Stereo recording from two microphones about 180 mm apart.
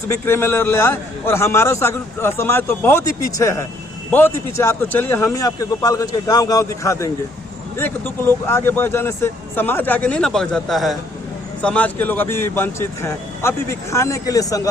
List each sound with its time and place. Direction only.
0.1 s a man's voice: 15° left (ahead or behind)